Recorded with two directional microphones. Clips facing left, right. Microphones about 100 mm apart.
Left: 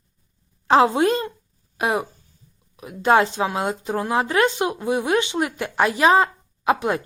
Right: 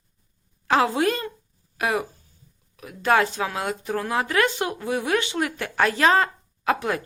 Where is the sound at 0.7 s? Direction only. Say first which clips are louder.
Left 4 dB; 25° left (ahead or behind).